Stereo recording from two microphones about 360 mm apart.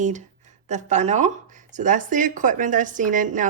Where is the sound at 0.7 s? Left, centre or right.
Centre.